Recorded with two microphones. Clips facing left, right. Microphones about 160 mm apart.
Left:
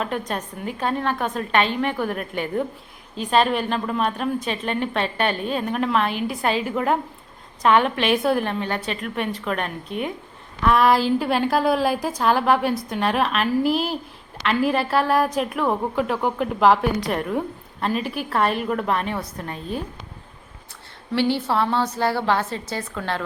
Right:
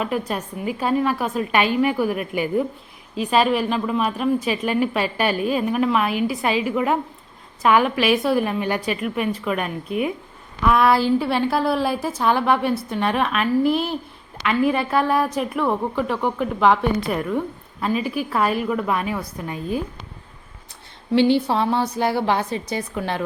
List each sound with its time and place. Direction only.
0.0 s a woman's voice: 5° right (ahead or behind)
11.4 s speech: 15° left (ahead or behind)
12.1 s a woman's voice: centre (ahead or behind)
21.1 s a woman's voice: 15° right (ahead or behind)